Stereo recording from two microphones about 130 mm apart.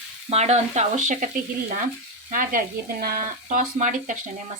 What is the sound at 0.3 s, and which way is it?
Speech, 60° right (ahead or behind).